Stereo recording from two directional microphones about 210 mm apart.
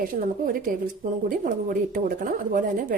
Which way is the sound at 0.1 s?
40° right (ahead or behind).